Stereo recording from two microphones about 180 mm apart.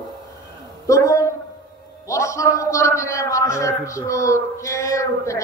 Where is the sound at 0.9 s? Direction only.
15° left (ahead or behind).